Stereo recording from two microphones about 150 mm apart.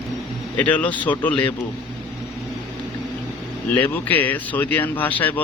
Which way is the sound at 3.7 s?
10° left (ahead or behind).